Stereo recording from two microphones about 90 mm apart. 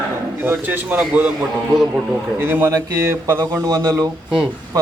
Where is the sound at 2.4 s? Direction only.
25° right (ahead or behind).